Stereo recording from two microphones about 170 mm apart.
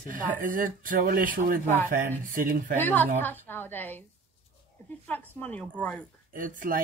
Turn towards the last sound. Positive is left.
turn(degrees=-55)  # may be behind; listen again after turning